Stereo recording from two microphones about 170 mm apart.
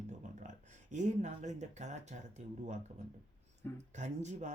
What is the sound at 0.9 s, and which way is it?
Speech, 45° right (ahead or behind).